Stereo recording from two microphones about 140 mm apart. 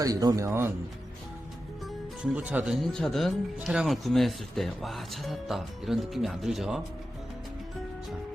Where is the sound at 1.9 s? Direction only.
10° right (ahead or behind).